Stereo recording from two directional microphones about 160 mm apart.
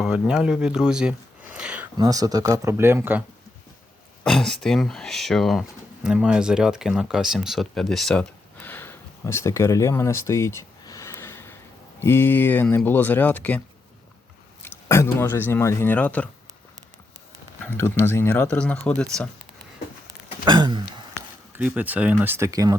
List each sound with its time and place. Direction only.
0.0 s a sound: 5° right (ahead or behind)
2.0 s speech: 20° right (ahead or behind)
4.2 s speech: 5° left (ahead or behind)
14.6 s speech: 15° left (ahead or behind)
17.7 s speech: 15° left (ahead or behind)
20.4 s a sound: 30° right (ahead or behind)
21.6 s speech: 10° right (ahead or behind)